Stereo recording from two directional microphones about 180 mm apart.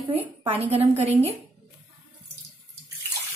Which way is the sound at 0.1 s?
35° right (ahead or behind).